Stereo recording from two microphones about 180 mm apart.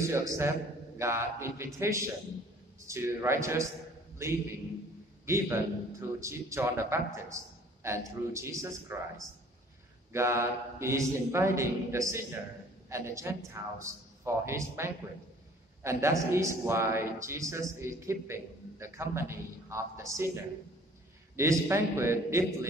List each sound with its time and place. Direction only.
0.0 s a man's voice: 15° right (ahead or behind)
7.2 s a sound: 15° right (ahead or behind)
8.3 s a man's voice: 15° right (ahead or behind)
10.1 s a man's voice: 15° right (ahead or behind)
21.4 s a man's voice: 15° right (ahead or behind)